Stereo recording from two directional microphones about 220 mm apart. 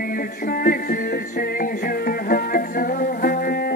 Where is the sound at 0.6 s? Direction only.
40° left (ahead or behind).